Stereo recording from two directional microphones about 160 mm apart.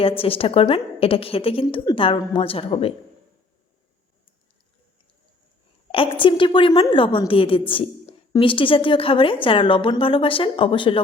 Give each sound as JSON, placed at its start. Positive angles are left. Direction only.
{"t": 0.2, "sound": "a woman's voice", "side_deg": 35}
{"t": 5.9, "sound": "a woman's voice", "side_deg": 35}